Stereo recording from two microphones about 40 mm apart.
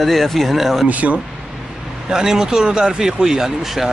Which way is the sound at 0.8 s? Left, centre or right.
Right.